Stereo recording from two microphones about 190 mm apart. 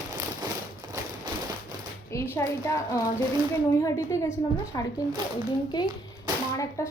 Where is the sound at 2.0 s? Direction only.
15° left (ahead or behind).